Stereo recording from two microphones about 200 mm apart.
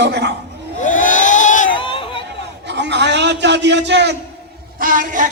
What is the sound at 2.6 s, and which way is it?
A man's voice, 60° right (ahead or behind).